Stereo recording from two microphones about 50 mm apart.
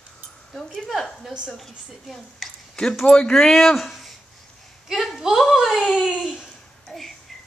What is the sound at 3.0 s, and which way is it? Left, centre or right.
Speech, centre.